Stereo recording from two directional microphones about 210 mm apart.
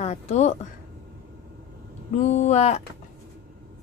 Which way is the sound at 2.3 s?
30° left (ahead or behind).